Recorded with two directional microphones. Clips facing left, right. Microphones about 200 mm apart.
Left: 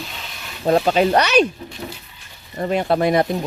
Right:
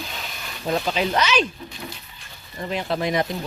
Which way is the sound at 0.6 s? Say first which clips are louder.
Left 7 dB; 50° left (ahead or behind).